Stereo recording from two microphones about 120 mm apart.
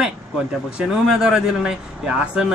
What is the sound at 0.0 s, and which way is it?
A man's voice, 5° right (ahead or behind).